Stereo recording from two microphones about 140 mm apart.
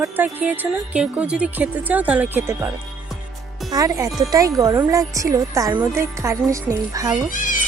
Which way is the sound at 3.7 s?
25° right (ahead or behind).